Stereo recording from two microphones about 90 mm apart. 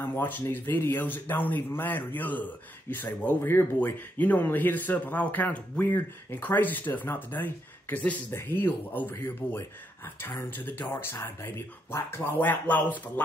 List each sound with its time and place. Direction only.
0.0 s speech: 25° left (ahead or behind)